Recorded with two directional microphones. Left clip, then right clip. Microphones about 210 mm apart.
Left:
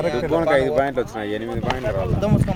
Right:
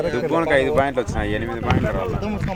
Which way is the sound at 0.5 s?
5° right (ahead or behind).